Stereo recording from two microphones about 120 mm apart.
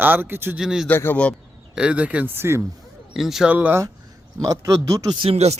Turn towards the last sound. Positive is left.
turn(degrees=-60)  # may be behind; listen again after turning